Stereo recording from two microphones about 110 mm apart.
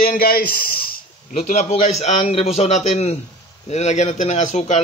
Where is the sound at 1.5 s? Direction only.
90° left.